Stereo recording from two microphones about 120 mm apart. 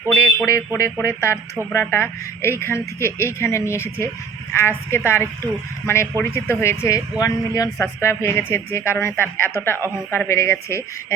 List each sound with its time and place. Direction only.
0.4 s speech: 25° left (ahead or behind)
4.9 s speech: 20° left (ahead or behind)